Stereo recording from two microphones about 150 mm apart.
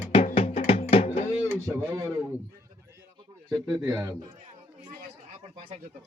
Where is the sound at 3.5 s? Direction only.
20° right (ahead or behind).